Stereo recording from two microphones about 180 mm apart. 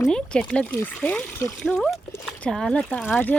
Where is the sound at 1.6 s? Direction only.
Centre (ahead or behind).